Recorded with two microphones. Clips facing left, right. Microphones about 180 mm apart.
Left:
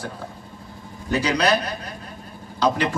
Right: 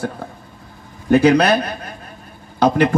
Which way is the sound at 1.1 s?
55° right (ahead or behind).